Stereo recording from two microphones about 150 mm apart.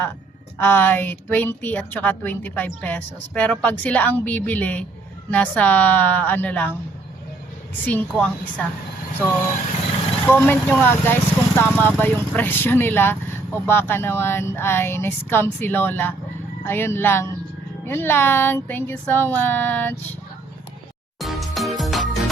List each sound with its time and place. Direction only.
0.6 s a woman's voice: 15° left (ahead or behind)
7.9 s a woman's voice: 10° left (ahead or behind)
10.2 s a woman's voice: 15° left (ahead or behind)
21.2 s music: centre (ahead or behind)